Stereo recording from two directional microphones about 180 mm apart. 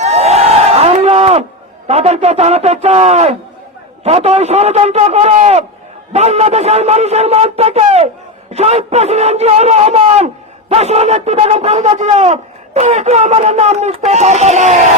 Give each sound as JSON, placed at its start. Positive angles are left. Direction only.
{"t": 0.0, "sound": "crowd", "side_deg": -35}
{"t": 1.9, "sound": "speech", "side_deg": -35}